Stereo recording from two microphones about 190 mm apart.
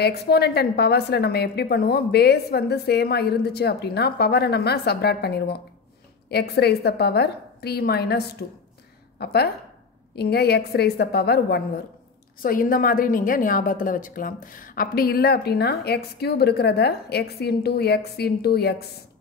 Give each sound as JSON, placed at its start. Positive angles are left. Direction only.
{"t": 0.0, "sound": "a woman's voice", "side_deg": 55}
{"t": 12.4, "sound": "a woman's voice", "side_deg": 50}